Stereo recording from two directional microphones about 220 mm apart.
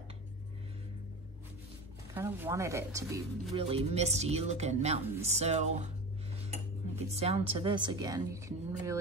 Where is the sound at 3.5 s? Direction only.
25° right (ahead or behind).